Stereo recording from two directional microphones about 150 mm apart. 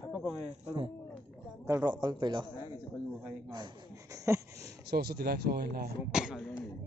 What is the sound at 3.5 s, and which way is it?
A man's voice, 30° right (ahead or behind).